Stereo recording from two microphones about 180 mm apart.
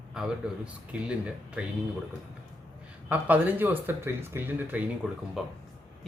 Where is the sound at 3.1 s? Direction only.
10° right (ahead or behind).